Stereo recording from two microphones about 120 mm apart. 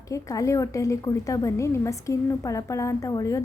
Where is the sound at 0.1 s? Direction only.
25° left (ahead or behind).